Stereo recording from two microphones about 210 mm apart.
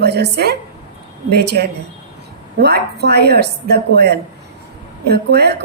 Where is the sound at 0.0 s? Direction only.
50° right (ahead or behind).